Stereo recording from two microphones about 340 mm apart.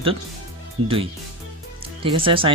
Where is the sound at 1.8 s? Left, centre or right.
Centre.